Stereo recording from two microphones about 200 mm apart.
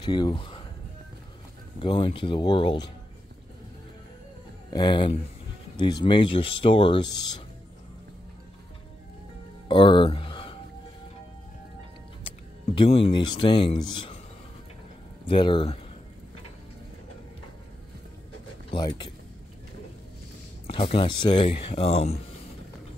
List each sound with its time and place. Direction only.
0.0 s speech: 25° left (ahead or behind)
1.8 s speech: 25° left (ahead or behind)
4.7 s speech: 25° left (ahead or behind)
9.7 s a sound: 25° left (ahead or behind)
12.7 s speech: 30° left (ahead or behind)
15.2 s speech: 25° left (ahead or behind)
18.7 s speech: 25° left (ahead or behind)
20.6 s speech: 30° left (ahead or behind)